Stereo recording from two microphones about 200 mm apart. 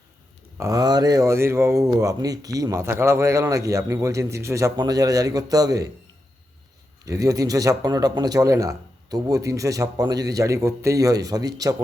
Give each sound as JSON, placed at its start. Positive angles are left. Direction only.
{"t": 0.5, "sound": "speech", "side_deg": -15}
{"t": 7.0, "sound": "speech", "side_deg": -15}